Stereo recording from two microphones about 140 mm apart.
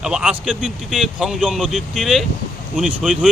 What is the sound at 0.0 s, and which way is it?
Speech, 5° right (ahead or behind).